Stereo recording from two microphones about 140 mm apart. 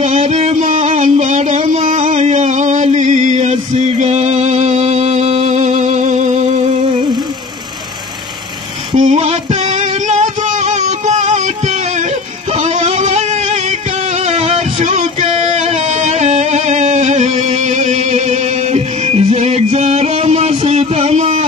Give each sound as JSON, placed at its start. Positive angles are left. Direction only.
{"t": 0.0, "sound": "music", "side_deg": -50}
{"t": 1.9, "sound": "music", "side_deg": -55}
{"t": 8.9, "sound": "music", "side_deg": -50}